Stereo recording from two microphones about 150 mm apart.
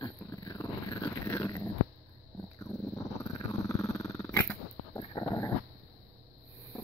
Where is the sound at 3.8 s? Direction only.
20° left (ahead or behind).